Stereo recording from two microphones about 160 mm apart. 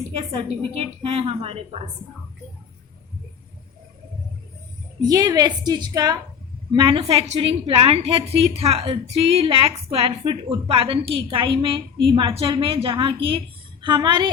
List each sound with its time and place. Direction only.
0.2 s a woman's voice: 30° right (ahead or behind)
5.0 s a woman's voice: 25° right (ahead or behind)
6.7 s a woman's voice: 35° right (ahead or behind)